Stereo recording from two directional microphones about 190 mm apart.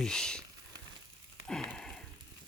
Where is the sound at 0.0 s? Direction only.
5° left (ahead or behind).